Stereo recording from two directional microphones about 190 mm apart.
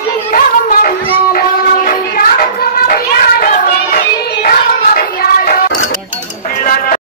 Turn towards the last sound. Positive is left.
turn(degrees=50)  # may be behind; listen again after turning